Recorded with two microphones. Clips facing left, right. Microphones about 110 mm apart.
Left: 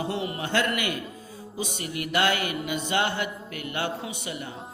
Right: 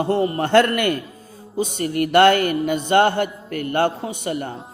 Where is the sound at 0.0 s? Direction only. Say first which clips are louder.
Right 10 dB; 45° right (ahead or behind).